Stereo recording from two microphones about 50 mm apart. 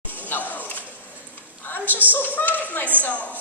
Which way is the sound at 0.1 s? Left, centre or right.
Left.